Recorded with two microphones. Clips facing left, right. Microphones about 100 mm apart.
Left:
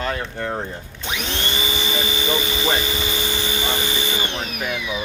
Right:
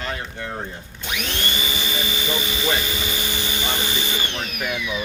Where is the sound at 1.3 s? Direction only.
30° left (ahead or behind).